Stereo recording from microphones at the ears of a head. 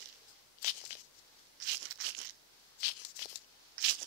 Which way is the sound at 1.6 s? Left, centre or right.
Right.